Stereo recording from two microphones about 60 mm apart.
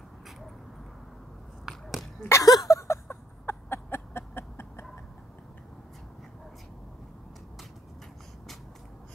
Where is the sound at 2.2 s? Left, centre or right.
Left.